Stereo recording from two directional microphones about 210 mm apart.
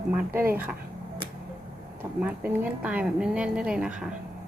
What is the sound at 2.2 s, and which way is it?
Speech, 5° right (ahead or behind).